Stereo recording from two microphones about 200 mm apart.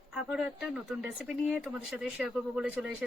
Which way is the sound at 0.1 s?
5° right (ahead or behind).